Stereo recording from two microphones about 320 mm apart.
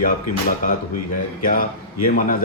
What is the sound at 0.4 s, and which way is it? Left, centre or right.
Speech, left.